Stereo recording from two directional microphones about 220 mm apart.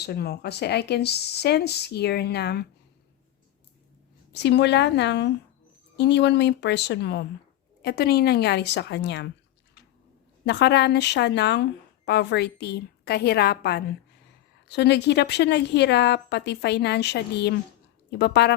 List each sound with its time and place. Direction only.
0.0 s a woman's voice: 45° left (ahead or behind)
4.3 s a woman's voice: 50° left (ahead or behind)
10.4 s a woman's voice: 50° left (ahead or behind)